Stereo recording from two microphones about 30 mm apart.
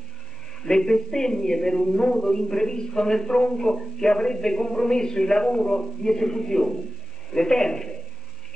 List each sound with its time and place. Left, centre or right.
0.6 s a man's voice: centre